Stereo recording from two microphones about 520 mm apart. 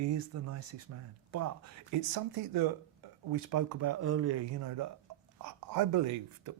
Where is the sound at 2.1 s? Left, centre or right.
Right.